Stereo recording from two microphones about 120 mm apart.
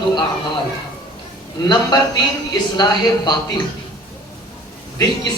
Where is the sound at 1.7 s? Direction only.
35° left (ahead or behind).